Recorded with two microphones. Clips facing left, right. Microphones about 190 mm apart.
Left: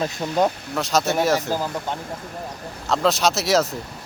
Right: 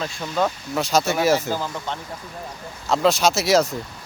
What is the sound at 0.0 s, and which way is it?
Speech, 20° left (ahead or behind).